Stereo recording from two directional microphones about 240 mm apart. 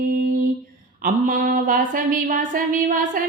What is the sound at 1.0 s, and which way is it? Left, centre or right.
A woman's voice, right.